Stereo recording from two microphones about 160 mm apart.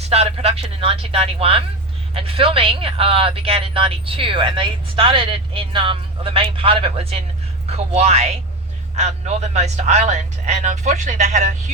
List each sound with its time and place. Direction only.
0.1 s speech: 40° right (ahead or behind)